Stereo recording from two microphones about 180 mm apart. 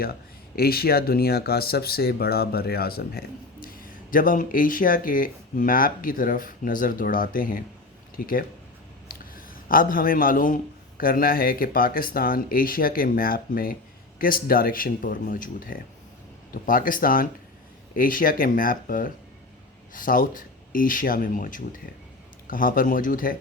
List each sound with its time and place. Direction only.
0.0 s a man's voice: 60° left (ahead or behind)